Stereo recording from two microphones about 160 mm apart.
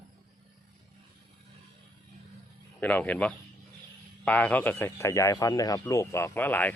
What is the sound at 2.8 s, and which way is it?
Speech, 10° left (ahead or behind).